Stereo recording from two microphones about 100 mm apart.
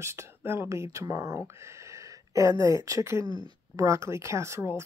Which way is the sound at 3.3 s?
40° right (ahead or behind).